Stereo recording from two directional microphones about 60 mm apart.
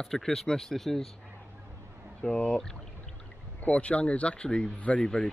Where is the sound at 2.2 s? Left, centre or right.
Centre.